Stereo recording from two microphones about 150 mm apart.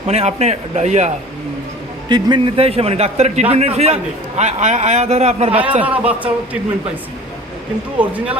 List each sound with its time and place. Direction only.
0.1 s a man's voice: 45° right (ahead or behind)
2.0 s a man's voice: 30° right (ahead or behind); by 5.5 s 45° right (ahead or behind)
5.8 s speech: 10° right (ahead or behind)
7.9 s speech: 10° right (ahead or behind)